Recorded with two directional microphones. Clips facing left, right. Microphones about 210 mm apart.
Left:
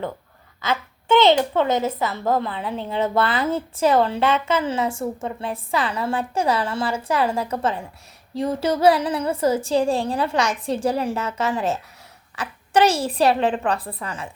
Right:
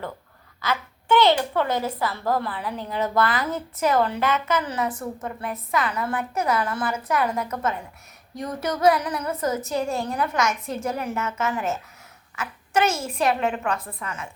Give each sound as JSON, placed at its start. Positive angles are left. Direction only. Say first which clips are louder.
{"t": 0.6, "sound": "a woman's voice", "louder": "left 2 dB", "side_deg": 25}